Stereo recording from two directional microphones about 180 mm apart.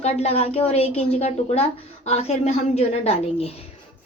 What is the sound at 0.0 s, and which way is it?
A woman's voice, 35° left (ahead or behind).